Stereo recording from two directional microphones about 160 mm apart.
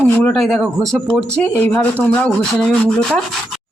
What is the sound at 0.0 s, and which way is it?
A woman's voice, 5° left (ahead or behind).